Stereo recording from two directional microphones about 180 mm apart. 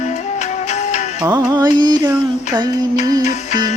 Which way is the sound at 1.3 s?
20° right (ahead or behind).